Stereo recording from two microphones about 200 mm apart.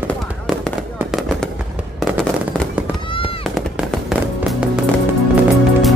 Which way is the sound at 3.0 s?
25° left (ahead or behind).